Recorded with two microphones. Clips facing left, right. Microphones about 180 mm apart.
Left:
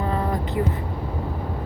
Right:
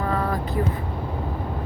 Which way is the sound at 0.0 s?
25° left (ahead or behind).